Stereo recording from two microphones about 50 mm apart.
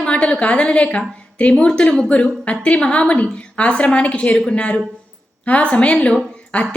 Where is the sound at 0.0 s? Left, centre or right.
Left.